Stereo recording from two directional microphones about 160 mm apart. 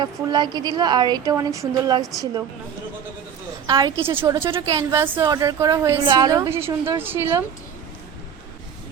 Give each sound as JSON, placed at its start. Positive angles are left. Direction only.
{"t": 0.0, "sound": "a woman's voice", "side_deg": -25}
{"t": 3.7, "sound": "a woman's voice", "side_deg": -25}
{"t": 4.6, "sound": "a woman's voice", "side_deg": -20}